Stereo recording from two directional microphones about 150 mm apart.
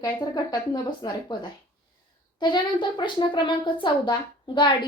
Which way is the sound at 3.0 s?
30° left (ahead or behind).